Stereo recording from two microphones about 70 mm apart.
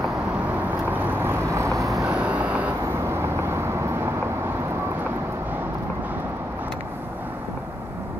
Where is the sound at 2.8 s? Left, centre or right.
Right.